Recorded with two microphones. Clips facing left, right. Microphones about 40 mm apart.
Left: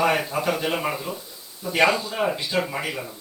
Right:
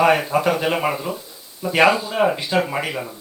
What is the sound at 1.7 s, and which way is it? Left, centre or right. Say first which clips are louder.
Speech: right 4 dB; right.